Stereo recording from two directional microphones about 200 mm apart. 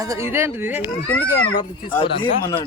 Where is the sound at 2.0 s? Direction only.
25° left (ahead or behind).